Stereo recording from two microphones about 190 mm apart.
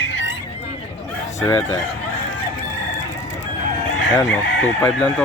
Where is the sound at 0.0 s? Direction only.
80° left.